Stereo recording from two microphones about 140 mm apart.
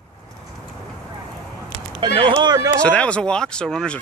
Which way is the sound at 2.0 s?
35° right (ahead or behind).